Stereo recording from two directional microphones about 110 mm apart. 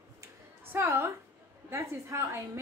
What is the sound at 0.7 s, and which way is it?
A woman's voice, 25° right (ahead or behind).